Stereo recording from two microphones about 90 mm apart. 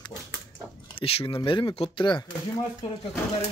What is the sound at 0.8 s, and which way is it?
Speech, 90° left.